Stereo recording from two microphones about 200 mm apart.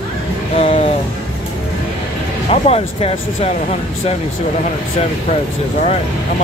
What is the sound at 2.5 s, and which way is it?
Speech, 30° left (ahead or behind).